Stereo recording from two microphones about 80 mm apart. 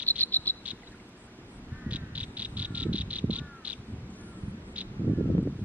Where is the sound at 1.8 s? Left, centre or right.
Centre.